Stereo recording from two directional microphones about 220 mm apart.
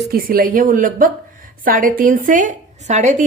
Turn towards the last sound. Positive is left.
turn(degrees=-30)  # may be behind; listen again after turning